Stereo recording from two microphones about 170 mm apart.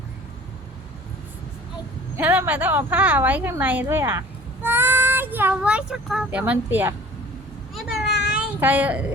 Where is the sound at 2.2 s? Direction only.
10° right (ahead or behind).